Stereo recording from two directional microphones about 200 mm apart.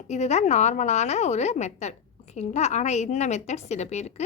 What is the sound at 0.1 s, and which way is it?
A woman's voice, 35° left (ahead or behind).